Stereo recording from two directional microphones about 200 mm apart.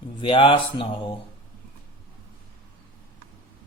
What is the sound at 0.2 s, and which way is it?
Speech, 25° left (ahead or behind).